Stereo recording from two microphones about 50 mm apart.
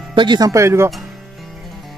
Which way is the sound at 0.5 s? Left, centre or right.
Right.